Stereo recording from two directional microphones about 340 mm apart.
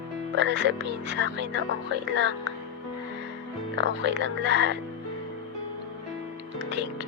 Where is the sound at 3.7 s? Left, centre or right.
Right.